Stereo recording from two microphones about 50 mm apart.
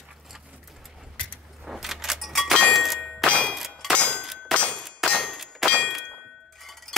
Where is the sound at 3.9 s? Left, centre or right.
Centre.